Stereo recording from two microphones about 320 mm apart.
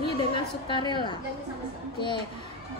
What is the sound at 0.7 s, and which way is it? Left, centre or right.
Speech, centre.